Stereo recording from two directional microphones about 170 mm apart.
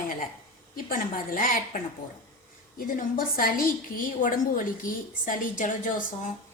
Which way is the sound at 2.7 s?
55° left (ahead or behind).